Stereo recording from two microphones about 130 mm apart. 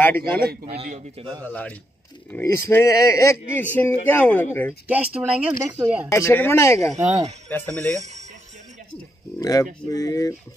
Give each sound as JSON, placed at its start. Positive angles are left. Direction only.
{"t": 0.0, "sound": "a man's voice", "side_deg": 15}
{"t": 0.7, "sound": "a man's voice", "side_deg": -55}
{"t": 1.4, "sound": "a man's voice", "side_deg": 10}
{"t": 4.8, "sound": "speech", "side_deg": -10}
{"t": 6.0, "sound": "speech", "side_deg": 20}
{"t": 6.9, "sound": "speech", "side_deg": -60}
{"t": 7.4, "sound": "a man's voice", "side_deg": 15}
{"t": 9.4, "sound": "speech", "side_deg": 30}